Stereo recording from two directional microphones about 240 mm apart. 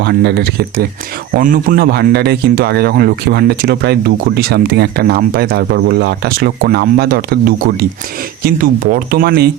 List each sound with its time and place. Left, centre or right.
0.0 s speech: right